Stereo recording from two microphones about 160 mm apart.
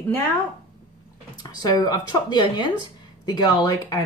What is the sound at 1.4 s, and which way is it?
Speech, 25° left (ahead or behind).